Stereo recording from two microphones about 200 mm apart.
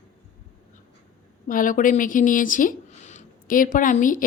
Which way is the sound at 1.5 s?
40° left (ahead or behind).